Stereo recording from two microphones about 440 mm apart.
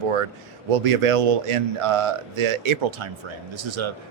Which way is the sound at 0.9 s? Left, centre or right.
Right.